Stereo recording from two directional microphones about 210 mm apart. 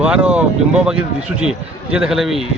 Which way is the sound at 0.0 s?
5° right (ahead or behind).